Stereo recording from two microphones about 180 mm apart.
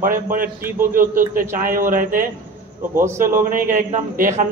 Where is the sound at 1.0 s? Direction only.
50° right (ahead or behind).